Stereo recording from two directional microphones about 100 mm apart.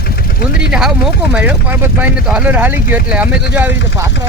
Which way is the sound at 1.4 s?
15° right (ahead or behind).